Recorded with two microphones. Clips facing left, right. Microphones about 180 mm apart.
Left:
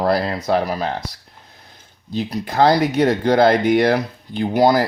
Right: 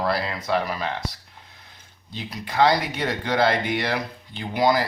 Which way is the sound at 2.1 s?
40° left (ahead or behind).